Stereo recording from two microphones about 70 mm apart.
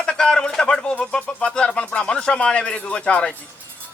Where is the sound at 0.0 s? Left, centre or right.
Centre.